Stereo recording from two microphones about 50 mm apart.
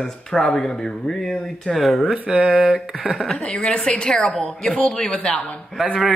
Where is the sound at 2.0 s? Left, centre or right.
Right.